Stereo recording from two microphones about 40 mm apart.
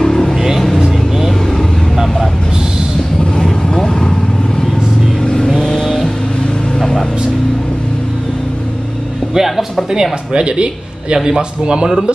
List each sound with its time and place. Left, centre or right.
0.0 s vehicle: centre
0.7 s vehicle: centre
3.4 s vehicle: centre
5.2 s vehicle: centre
5.6 s vehicle: centre
6.8 s music: centre
9.3 s music: centre
10.3 s a man's voice: right